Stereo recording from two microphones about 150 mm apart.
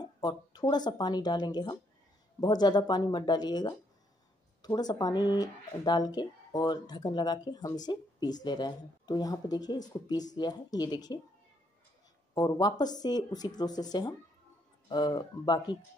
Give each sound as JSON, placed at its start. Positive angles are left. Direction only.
{"t": 0.0, "sound": "speech", "side_deg": 30}
{"t": 12.4, "sound": "speech", "side_deg": 25}